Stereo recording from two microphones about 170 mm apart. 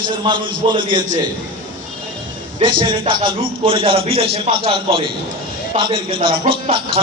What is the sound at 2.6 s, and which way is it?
A man's voice, 30° right (ahead or behind).